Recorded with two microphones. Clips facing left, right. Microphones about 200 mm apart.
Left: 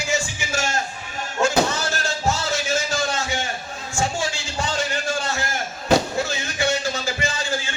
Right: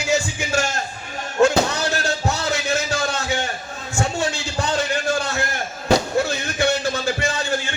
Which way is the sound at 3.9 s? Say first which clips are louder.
Right 2 dB; 60° right (ahead or behind).